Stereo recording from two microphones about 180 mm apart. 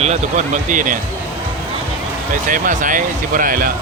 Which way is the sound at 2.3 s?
50° right (ahead or behind).